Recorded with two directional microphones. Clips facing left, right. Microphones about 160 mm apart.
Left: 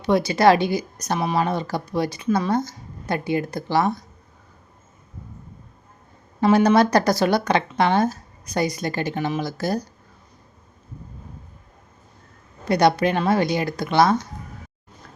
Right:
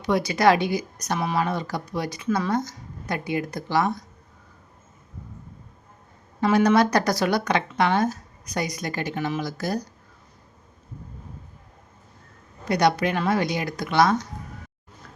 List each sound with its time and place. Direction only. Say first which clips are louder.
0.0 s a woman's voice: left 3 dB; 25° left (ahead or behind)
6.4 s a woman's voice: left 3 dB; 30° left (ahead or behind)
12.6 s a woman's voice: left 3 dB; 30° left (ahead or behind)